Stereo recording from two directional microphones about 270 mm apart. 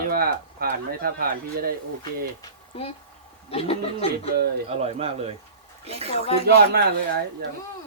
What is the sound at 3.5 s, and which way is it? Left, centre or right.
Speech, left.